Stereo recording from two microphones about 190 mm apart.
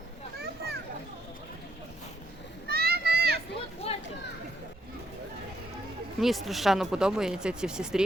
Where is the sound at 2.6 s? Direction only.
55° right (ahead or behind).